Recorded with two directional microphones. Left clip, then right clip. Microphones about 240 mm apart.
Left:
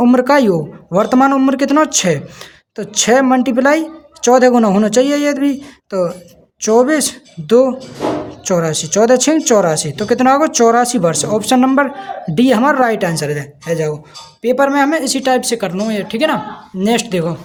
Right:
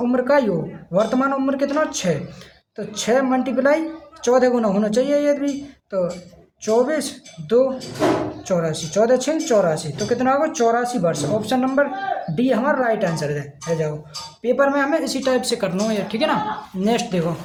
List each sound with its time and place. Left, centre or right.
0.0 s a woman's voice: left